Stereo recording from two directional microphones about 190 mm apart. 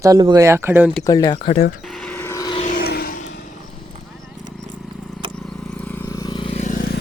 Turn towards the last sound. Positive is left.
turn(degrees=45)  # may be behind; listen again after turning